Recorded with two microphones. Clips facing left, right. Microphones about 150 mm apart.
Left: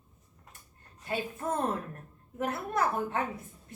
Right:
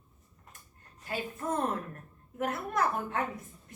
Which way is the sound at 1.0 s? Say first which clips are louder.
Left 2 dB; 25° left (ahead or behind).